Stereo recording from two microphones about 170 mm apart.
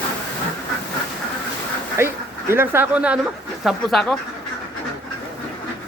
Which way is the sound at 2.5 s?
15° right (ahead or behind).